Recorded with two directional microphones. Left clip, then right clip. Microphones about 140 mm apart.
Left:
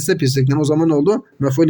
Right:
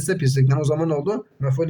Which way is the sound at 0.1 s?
30° left (ahead or behind).